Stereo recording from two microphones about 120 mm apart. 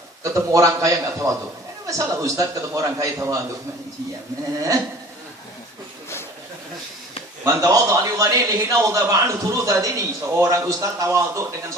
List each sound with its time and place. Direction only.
0.2 s a man's voice: 25° right (ahead or behind)
7.4 s a man's voice: 25° right (ahead or behind)